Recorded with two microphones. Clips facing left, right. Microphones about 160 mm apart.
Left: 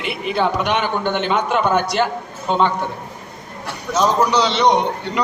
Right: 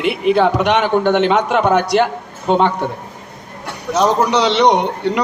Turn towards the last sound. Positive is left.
turn(degrees=-65)  # may be behind; listen again after turning